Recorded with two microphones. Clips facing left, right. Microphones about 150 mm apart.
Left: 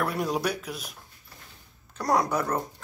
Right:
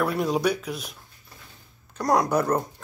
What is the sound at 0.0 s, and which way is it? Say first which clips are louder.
Speech: right 4 dB; centre (ahead or behind).